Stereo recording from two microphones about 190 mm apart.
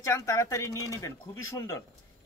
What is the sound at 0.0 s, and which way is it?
Speech, 15° left (ahead or behind).